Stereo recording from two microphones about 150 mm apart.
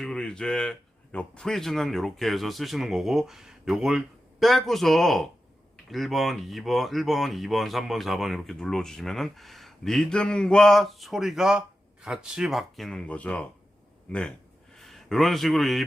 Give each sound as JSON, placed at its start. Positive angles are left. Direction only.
{"t": 0.0, "sound": "a man's voice", "side_deg": 5}